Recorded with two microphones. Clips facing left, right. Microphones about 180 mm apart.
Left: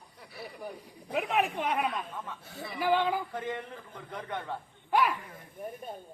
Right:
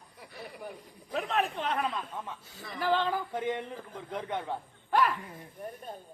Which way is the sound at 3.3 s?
20° right (ahead or behind).